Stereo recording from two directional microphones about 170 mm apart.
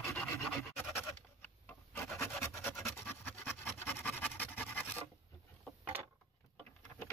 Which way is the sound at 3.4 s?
10° left (ahead or behind).